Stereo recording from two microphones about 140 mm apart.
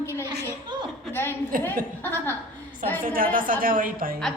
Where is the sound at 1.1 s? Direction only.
15° left (ahead or behind).